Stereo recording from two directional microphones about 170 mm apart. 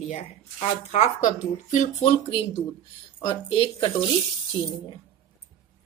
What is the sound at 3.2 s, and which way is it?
Speech, 30° left (ahead or behind).